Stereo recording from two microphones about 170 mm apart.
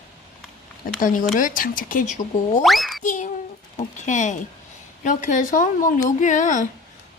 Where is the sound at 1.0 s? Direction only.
50° left (ahead or behind).